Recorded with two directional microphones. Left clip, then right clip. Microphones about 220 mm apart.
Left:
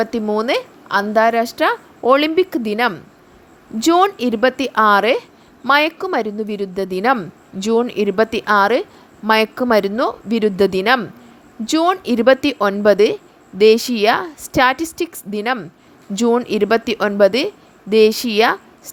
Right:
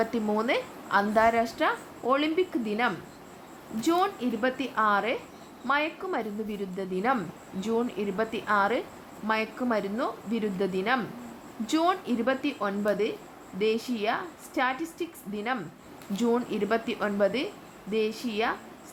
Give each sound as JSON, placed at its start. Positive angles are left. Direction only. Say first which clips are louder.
{"t": 0.0, "sound": "a woman's voice", "louder": "left 9 dB", "side_deg": 35}